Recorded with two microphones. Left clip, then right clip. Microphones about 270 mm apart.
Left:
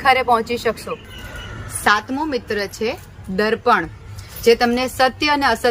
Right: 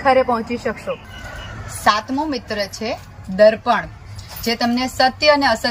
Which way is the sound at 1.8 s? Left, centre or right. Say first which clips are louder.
Even; centre.